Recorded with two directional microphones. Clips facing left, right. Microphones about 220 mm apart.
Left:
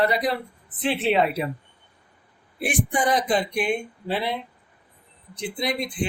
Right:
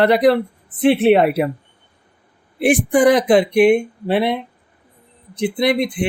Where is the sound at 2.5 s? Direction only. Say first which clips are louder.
Right 10 dB; 75° right (ahead or behind).